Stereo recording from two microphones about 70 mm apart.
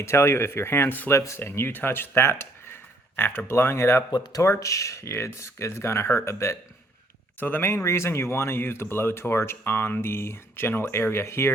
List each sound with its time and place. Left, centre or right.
0.0 s speech: left
1.1 s speech: left
4.1 s speech: left
4.4 s speech: left
7.3 s speech: left
7.9 s speech: left